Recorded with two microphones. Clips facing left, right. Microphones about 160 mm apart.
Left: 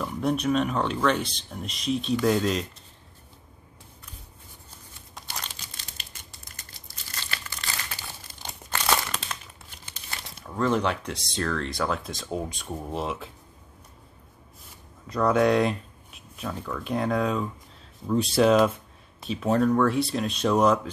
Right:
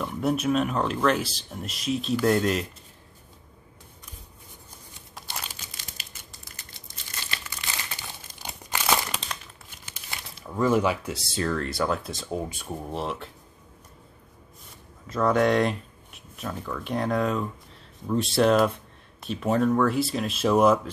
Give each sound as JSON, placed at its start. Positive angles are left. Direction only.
{"t": 0.0, "sound": "speech", "side_deg": -5}
{"t": 5.1, "sound": "crumpling", "side_deg": -5}
{"t": 8.3, "sound": "crumpling", "side_deg": -45}
{"t": 8.6, "sound": "crumpling", "side_deg": -15}
{"t": 10.1, "sound": "speech", "side_deg": -5}
{"t": 15.0, "sound": "speech", "side_deg": 0}